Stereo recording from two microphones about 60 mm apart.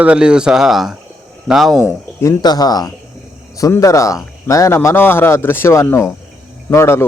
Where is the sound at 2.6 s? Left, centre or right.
Left.